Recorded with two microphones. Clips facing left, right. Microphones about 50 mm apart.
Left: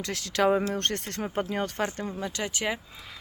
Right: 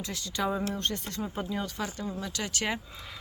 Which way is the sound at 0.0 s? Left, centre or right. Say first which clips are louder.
Left 7 dB; left.